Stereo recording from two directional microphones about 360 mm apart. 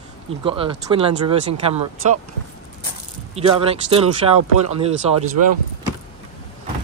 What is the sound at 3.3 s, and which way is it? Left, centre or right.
Speech, centre.